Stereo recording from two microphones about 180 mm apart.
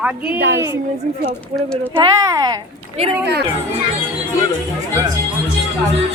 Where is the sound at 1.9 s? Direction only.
20° right (ahead or behind).